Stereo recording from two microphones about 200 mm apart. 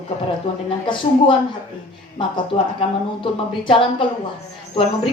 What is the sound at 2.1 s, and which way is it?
A woman's voice, 25° left (ahead or behind).